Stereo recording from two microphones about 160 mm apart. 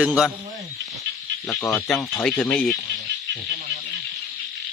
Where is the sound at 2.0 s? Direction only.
20° left (ahead or behind).